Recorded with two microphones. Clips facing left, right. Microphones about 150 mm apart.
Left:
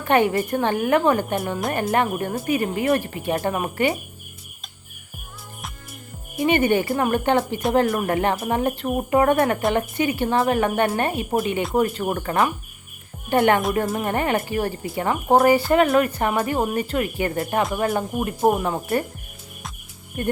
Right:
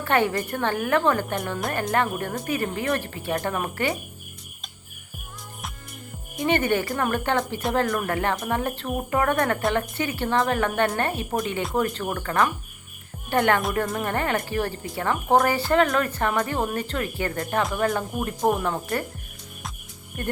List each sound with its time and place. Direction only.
0.0 s a woman's voice: 15° left (ahead or behind)
6.3 s a woman's voice: 10° left (ahead or behind)
20.2 s a woman's voice: 15° left (ahead or behind)